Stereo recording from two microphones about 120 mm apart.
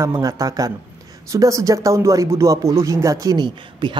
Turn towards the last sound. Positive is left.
turn(degrees=-40)  # may be behind; listen again after turning